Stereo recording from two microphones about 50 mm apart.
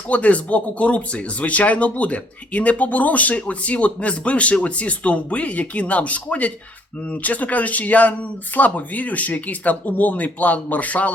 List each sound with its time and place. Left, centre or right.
0.1 s speech: left